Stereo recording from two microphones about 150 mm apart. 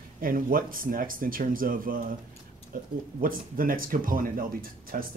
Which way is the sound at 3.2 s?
70° right (ahead or behind).